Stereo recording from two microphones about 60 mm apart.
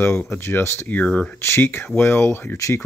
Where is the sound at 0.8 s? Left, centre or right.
Left.